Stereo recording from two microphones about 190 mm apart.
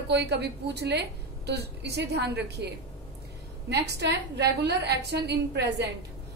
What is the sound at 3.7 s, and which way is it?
A woman's voice, 60° right (ahead or behind).